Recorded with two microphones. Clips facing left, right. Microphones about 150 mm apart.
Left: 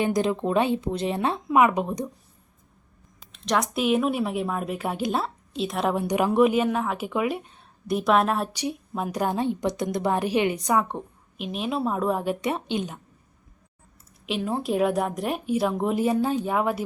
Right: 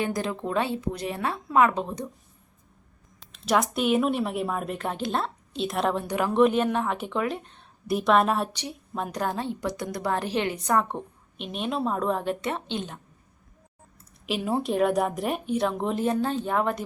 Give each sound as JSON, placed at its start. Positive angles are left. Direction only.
{"t": 0.0, "sound": "a woman's voice", "side_deg": 20}
{"t": 3.2, "sound": "speech", "side_deg": -5}
{"t": 5.9, "sound": "a woman's voice", "side_deg": 15}
{"t": 10.8, "sound": "speech", "side_deg": 0}
{"t": 14.3, "sound": "speech", "side_deg": 0}